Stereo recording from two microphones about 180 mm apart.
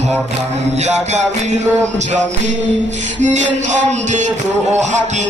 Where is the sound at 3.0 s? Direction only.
40° right (ahead or behind).